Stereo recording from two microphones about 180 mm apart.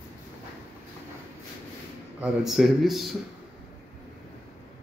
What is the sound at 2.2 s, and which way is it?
Speech, centre (ahead or behind).